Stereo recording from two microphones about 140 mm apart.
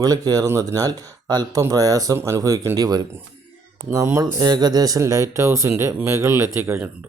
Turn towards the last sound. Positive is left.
turn(degrees=-15)  # may be behind; listen again after turning